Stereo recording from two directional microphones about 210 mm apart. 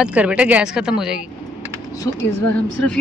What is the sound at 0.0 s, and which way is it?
A woman's voice, 5° right (ahead or behind).